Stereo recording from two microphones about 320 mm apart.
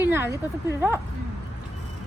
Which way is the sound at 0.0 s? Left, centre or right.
Centre.